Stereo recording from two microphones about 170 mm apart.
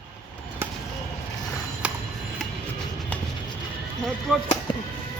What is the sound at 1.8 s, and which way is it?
Clock, 5° right (ahead or behind).